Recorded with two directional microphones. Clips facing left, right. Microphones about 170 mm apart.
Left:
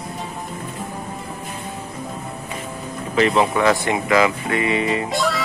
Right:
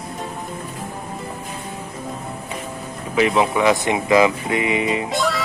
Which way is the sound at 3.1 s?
10° right (ahead or behind).